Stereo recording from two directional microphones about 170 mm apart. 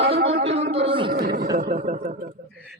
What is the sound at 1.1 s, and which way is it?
Speech, 65° right (ahead or behind).